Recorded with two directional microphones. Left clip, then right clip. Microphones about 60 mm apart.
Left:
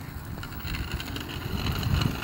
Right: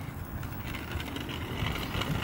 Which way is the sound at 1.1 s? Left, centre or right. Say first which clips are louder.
Left 1 dB; left.